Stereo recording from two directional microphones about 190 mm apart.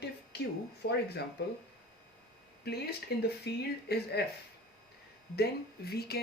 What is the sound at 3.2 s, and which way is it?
Speech, 60° left (ahead or behind).